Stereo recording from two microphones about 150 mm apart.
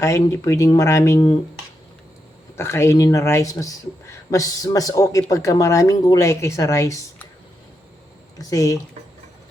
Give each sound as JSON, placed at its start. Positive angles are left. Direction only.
{"t": 0.0, "sound": "speech", "side_deg": 20}
{"t": 2.6, "sound": "speech", "side_deg": 15}
{"t": 8.4, "sound": "speech", "side_deg": 20}